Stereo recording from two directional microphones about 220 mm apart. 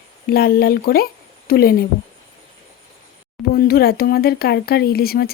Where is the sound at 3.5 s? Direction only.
45° left (ahead or behind).